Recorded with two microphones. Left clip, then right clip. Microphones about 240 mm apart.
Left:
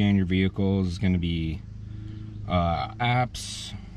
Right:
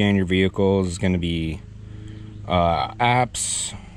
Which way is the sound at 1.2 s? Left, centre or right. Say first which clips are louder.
Right 5 dB; right.